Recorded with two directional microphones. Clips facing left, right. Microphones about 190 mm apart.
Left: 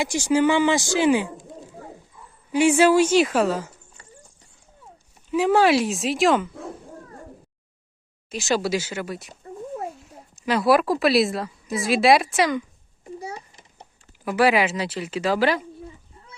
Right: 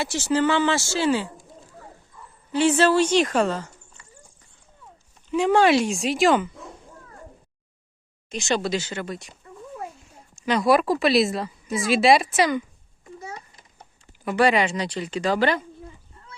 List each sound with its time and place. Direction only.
0.0 s speech: 15° left (ahead or behind)
2.5 s speech: 10° left (ahead or behind)
5.3 s a woman's voice: 5° left (ahead or behind)
8.3 s speech: 5° left (ahead or behind)
9.4 s a sound: 35° left (ahead or behind)
10.4 s a woman's voice: 5° left (ahead or behind)
13.2 s a sound: 30° left (ahead or behind)
14.3 s a woman's voice: 5° left (ahead or behind)